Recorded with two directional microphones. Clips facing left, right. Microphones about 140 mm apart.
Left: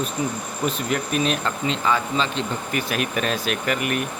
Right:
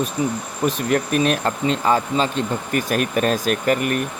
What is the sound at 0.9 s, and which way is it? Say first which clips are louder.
Speech: right 5 dB; 50° right (ahead or behind).